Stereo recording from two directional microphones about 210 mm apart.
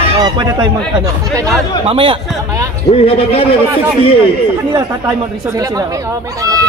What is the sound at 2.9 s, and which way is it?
Speech, 25° left (ahead or behind).